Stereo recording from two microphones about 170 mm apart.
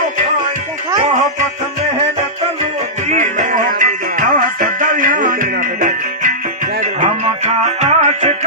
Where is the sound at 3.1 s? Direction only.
45° right (ahead or behind).